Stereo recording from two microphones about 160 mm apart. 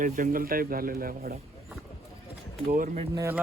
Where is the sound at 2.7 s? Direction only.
60° right (ahead or behind).